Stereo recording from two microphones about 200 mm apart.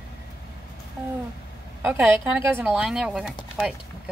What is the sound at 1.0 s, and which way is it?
A woman's voice, 10° right (ahead or behind).